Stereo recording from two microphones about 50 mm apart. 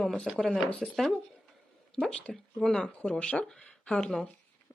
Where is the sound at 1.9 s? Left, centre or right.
Centre.